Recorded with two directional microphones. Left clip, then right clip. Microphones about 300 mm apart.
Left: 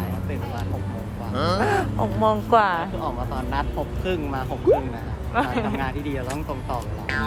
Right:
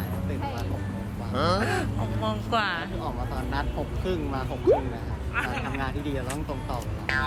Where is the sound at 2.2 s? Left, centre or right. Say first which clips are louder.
Left 9 dB; left.